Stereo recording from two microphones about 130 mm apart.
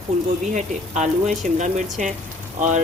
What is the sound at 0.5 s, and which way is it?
Speech, 70° right (ahead or behind).